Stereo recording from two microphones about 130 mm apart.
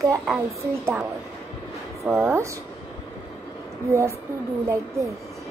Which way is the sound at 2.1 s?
20° right (ahead or behind).